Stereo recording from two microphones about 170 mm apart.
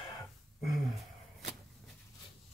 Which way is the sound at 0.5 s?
Centre (ahead or behind).